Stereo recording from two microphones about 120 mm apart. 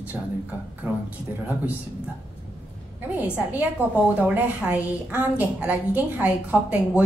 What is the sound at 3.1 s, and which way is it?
A woman's voice, 10° right (ahead or behind).